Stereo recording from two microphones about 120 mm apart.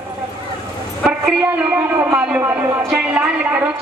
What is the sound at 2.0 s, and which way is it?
Speech, 10° right (ahead or behind).